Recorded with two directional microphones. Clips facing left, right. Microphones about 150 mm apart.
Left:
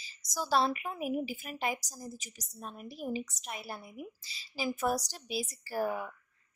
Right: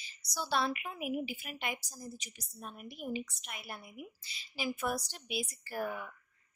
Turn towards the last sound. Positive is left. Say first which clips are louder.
# left 5 dB
turn(degrees=35)  # may be behind; listen again after turning